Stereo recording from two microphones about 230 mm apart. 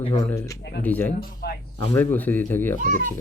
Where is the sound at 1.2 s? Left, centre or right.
Left.